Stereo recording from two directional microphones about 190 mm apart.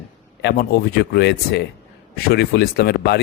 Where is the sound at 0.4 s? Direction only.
60° left (ahead or behind).